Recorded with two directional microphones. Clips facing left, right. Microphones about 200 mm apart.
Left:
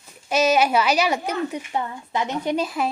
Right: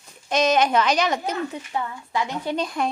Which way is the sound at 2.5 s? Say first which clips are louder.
Right 1 dB; 5° left (ahead or behind).